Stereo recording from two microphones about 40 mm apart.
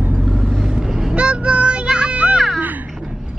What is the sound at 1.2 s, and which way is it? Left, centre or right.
Child singing, right.